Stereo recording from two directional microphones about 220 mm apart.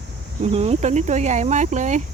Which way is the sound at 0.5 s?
30° right (ahead or behind).